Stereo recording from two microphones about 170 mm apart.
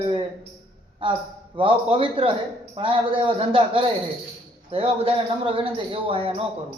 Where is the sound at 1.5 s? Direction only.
30° right (ahead or behind).